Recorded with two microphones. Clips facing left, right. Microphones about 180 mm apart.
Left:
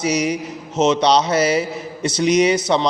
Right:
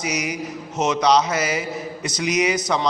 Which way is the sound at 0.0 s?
30° left (ahead or behind).